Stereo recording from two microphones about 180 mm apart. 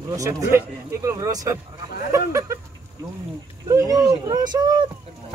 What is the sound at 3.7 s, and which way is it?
Speech, 20° right (ahead or behind).